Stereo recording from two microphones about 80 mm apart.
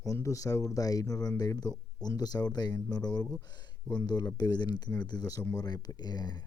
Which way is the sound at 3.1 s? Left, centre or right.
Centre.